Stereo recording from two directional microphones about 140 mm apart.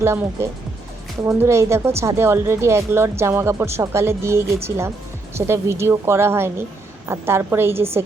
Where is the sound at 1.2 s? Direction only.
20° right (ahead or behind).